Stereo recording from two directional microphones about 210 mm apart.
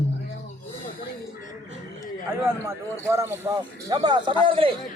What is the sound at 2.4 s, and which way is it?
Speech, 10° right (ahead or behind).